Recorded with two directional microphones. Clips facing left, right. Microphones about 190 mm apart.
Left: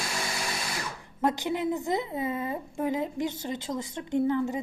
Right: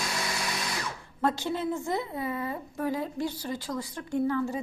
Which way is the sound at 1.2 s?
15° left (ahead or behind).